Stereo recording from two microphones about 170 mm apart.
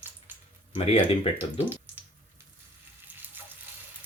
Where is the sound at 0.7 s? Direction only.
35° left (ahead or behind).